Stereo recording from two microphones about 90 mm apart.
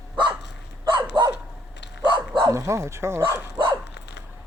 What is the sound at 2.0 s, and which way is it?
Bow-wow, 60° right (ahead or behind).